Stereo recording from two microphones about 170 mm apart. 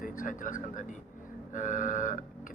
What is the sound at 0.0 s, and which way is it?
Speech, 55° left (ahead or behind).